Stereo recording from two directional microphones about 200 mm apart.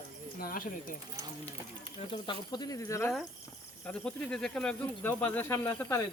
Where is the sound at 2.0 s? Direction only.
25° left (ahead or behind).